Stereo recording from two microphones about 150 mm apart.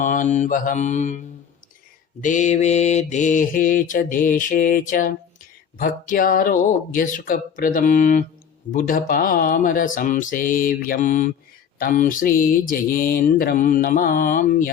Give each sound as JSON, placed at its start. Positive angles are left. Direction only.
{"t": 0.0, "sound": "mantra", "side_deg": 60}
{"t": 2.2, "sound": "mantra", "side_deg": 55}